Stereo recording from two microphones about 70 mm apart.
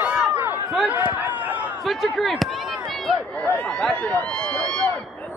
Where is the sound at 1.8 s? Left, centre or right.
Centre.